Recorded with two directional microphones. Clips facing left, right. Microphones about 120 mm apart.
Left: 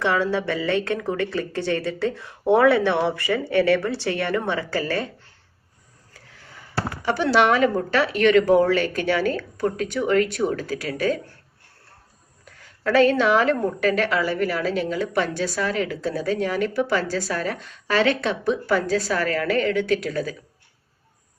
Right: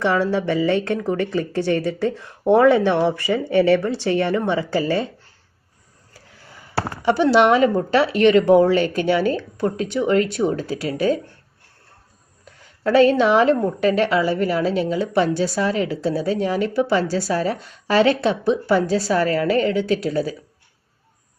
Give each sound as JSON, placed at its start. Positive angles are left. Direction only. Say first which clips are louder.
{"t": 0.0, "sound": "a woman's voice", "louder": "right 3 dB", "side_deg": -15}
{"t": 6.7, "sound": "a woman's voice", "louder": "right 5 dB", "side_deg": -30}
{"t": 12.8, "sound": "a woman's voice", "louder": "right 3 dB", "side_deg": -30}